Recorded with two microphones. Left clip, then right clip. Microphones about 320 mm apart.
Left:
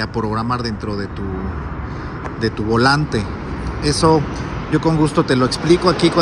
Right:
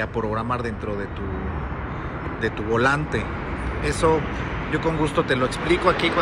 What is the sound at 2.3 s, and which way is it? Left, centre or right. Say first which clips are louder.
A man's voice: left 5 dB; centre.